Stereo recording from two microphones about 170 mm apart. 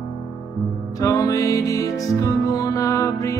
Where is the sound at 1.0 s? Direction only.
20° left (ahead or behind).